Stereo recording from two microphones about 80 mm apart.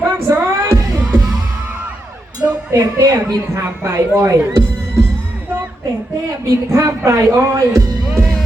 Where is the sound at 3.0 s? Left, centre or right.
Right.